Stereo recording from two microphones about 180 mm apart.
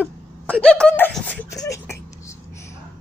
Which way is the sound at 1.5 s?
15° left (ahead or behind).